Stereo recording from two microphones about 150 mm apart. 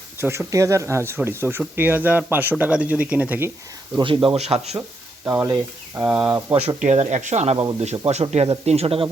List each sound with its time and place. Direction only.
0.2 s speech: 20° right (ahead or behind)
3.9 s a man's voice: 35° right (ahead or behind)
5.2 s speech: 15° right (ahead or behind)
6.7 s speech: 50° right (ahead or behind)